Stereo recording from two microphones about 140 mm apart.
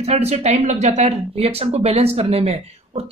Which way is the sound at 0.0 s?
50° right (ahead or behind).